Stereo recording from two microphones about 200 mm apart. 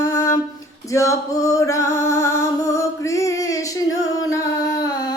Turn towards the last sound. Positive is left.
turn(degrees=20)  # may be behind; listen again after turning